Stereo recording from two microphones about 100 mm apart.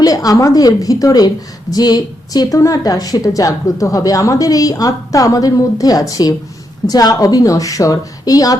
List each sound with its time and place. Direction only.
0.0 s a woman's voice: 35° left (ahead or behind)